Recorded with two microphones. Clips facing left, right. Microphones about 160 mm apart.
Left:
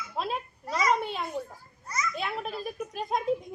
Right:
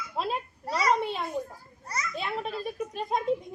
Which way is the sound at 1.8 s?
35° right (ahead or behind).